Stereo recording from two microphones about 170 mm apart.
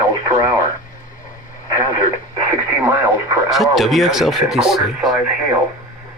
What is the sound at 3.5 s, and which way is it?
Speech, centre (ahead or behind).